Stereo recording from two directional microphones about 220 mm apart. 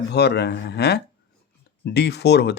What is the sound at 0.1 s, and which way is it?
Speech, 50° left (ahead or behind).